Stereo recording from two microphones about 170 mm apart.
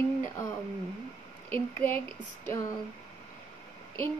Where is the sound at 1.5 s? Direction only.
10° left (ahead or behind).